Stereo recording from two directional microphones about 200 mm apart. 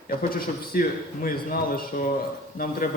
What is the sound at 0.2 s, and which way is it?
A man's voice, 45° left (ahead or behind).